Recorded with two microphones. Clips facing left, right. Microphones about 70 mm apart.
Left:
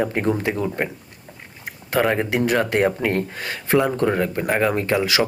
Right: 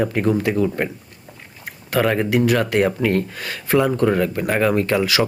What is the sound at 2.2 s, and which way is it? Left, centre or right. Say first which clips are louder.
Speech: right 2 dB; left.